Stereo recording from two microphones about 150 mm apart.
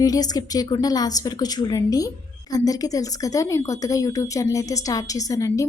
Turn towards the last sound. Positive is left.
turn(degrees=20)  # may be behind; listen again after turning